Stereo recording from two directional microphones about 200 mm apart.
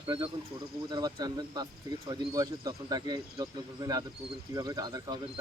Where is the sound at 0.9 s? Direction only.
20° right (ahead or behind).